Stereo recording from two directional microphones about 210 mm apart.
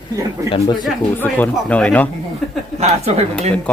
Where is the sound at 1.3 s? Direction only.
5° left (ahead or behind).